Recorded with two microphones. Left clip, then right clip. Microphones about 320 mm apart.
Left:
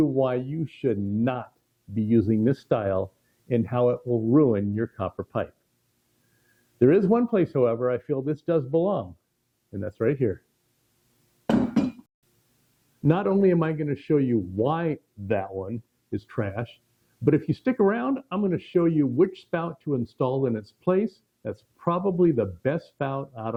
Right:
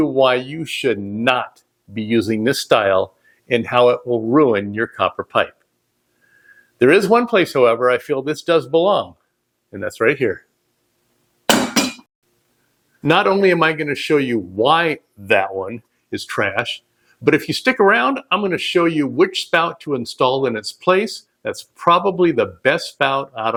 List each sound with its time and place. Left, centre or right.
0.2 s speech: centre
4.0 s speech: centre
4.4 s speech: centre
6.7 s speech: centre
11.4 s hammer: centre
13.0 s speech: centre